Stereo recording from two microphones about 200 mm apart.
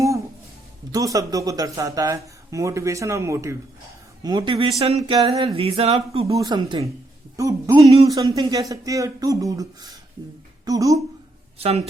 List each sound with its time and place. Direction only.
0.9 s speech: 15° right (ahead or behind)
6.2 s speech: 15° right (ahead or behind)